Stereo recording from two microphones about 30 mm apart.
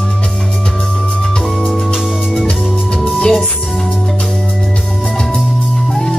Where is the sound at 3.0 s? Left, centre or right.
Left.